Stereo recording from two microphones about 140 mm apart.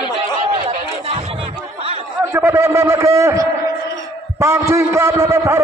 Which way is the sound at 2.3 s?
15° right (ahead or behind).